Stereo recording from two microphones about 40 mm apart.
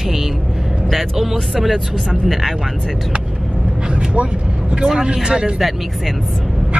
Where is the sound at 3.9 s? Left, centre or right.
Right.